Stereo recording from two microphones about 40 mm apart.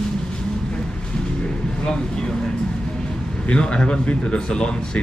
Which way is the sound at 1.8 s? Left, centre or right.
Centre.